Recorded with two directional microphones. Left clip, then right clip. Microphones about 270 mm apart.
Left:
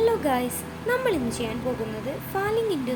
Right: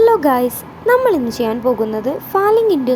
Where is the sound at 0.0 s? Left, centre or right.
Right.